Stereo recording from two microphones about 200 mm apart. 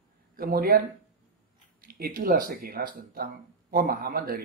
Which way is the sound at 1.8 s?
50° right (ahead or behind).